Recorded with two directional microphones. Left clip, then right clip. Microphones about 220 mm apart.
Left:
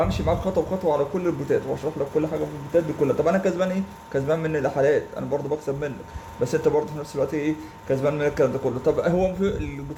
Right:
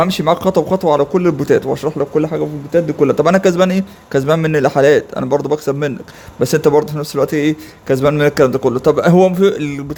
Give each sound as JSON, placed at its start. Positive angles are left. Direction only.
{"t": 0.0, "sound": "a man's voice", "side_deg": -50}